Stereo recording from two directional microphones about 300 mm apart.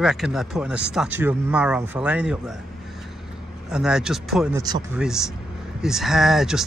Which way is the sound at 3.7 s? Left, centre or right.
Centre.